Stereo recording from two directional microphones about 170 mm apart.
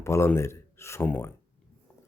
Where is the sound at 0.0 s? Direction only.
15° left (ahead or behind).